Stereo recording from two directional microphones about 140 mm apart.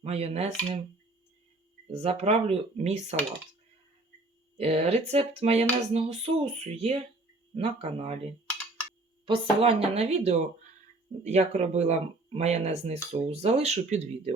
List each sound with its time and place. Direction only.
0.0 s speech: 45° right (ahead or behind)
1.9 s speech: 45° right (ahead or behind)
4.5 s speech: 45° right (ahead or behind)
9.2 s speech: 40° right (ahead or behind)